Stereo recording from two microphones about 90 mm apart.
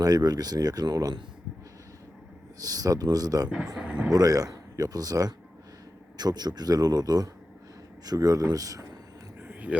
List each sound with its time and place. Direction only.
0.0 s speech: 45° right (ahead or behind)
2.6 s speech: 45° right (ahead or behind)
3.8 s speech: 15° right (ahead or behind)
4.1 s speech: 45° right (ahead or behind)
9.4 s a sound: 20° right (ahead or behind)